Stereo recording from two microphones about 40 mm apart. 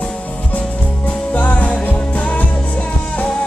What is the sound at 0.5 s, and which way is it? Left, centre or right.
Music, left.